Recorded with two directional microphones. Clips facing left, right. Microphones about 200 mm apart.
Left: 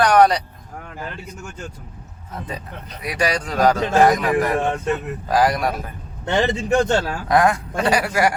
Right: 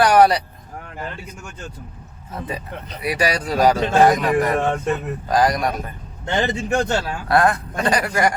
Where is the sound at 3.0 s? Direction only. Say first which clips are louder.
Right 1 dB; 5° right (ahead or behind).